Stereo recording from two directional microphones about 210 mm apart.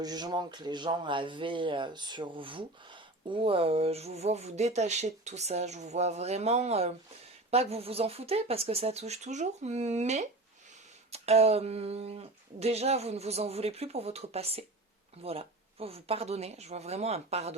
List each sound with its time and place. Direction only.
0.0 s speech: 20° right (ahead or behind)